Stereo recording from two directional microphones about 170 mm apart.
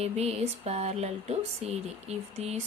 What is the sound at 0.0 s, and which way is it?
Speech, 40° right (ahead or behind).